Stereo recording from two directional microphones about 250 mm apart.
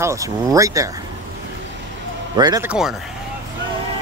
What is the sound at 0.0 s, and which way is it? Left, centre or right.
Speech, centre.